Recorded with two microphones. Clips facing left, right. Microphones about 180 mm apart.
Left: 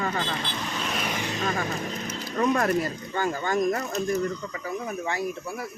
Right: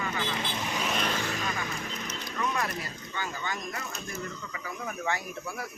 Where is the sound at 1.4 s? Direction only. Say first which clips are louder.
Left 6 dB; 45° left (ahead or behind).